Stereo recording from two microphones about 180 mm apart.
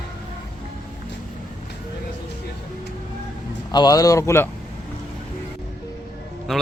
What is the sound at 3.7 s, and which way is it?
Speech, 20° left (ahead or behind).